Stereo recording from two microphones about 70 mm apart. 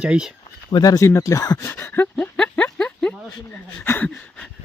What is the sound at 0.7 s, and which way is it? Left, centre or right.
Speech, left.